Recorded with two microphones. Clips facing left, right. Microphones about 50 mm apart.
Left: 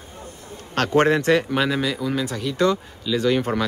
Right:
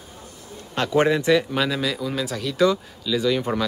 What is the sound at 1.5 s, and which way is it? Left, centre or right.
Speech, centre.